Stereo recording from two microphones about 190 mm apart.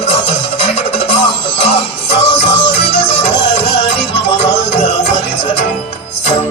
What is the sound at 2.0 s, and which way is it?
Music, 60° left (ahead or behind).